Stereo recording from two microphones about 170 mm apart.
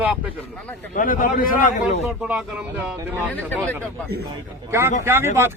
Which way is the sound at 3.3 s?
10° left (ahead or behind).